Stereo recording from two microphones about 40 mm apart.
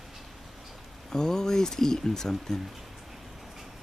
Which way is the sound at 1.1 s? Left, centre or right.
Centre.